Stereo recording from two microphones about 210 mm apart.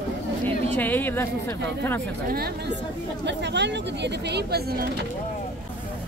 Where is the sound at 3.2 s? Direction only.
55° right (ahead or behind).